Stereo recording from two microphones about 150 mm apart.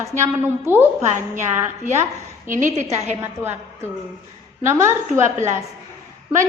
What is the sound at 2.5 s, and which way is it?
Speech, 60° right (ahead or behind).